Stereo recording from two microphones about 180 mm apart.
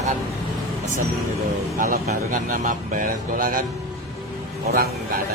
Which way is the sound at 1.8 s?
45° right (ahead or behind).